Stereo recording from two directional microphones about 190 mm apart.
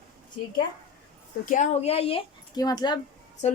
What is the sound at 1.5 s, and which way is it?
Speech, 35° left (ahead or behind).